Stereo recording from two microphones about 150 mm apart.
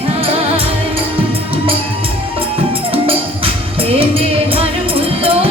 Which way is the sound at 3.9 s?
40° right (ahead or behind).